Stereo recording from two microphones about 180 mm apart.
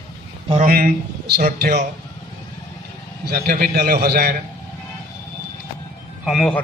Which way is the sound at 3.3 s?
55° right (ahead or behind).